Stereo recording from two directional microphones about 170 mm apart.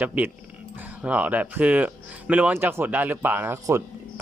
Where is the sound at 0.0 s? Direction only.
10° right (ahead or behind).